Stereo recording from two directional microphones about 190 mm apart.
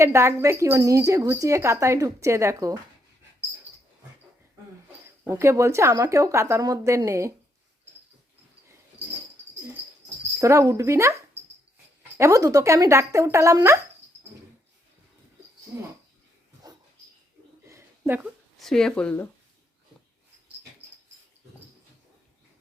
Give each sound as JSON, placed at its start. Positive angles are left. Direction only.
{"t": 0.0, "sound": "speech", "side_deg": -15}
{"t": 5.0, "sound": "speech", "side_deg": -15}
{"t": 10.4, "sound": "speech", "side_deg": -15}
{"t": 15.7, "sound": "speech", "side_deg": -10}
{"t": 17.7, "sound": "a sound", "side_deg": -15}
{"t": 18.6, "sound": "speech", "side_deg": 5}